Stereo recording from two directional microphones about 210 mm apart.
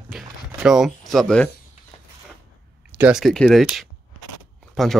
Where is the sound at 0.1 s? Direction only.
5° right (ahead or behind).